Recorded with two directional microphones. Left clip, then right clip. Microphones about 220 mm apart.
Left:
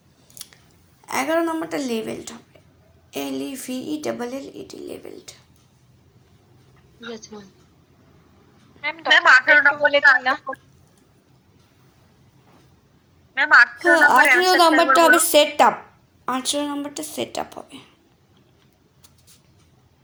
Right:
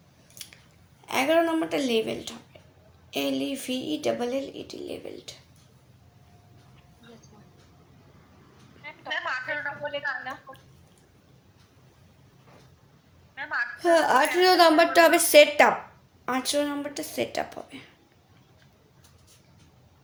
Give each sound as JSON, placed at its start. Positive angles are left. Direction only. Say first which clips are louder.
{"t": 1.0, "sound": "a woman's voice", "louder": "left 1 dB", "side_deg": 20}
{"t": 7.0, "sound": "a woman's voice", "louder": "left 17 dB", "side_deg": 40}
{"t": 8.8, "sound": "a woman's voice", "louder": "left 16 dB", "side_deg": 45}
{"t": 13.3, "sound": "a woman's voice", "louder": "left 17 dB", "side_deg": 40}
{"t": 13.8, "sound": "a woman's voice", "louder": "left 7 dB", "side_deg": 20}